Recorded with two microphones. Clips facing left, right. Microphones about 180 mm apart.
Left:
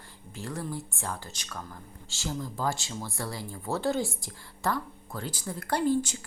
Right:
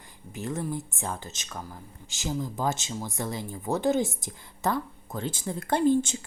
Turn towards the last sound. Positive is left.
turn(degrees=-25)  # may be behind; listen again after turning